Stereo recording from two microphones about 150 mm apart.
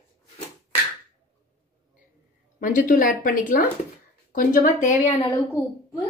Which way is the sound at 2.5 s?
60° left (ahead or behind).